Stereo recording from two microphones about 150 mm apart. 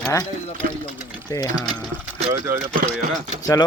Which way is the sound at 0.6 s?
70° right (ahead or behind).